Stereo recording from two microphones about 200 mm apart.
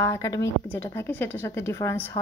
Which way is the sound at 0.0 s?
15° left (ahead or behind).